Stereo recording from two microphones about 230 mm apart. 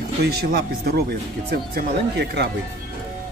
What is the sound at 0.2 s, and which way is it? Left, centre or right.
Speech, right.